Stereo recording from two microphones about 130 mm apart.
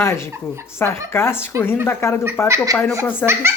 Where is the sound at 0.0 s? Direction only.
20° left (ahead or behind).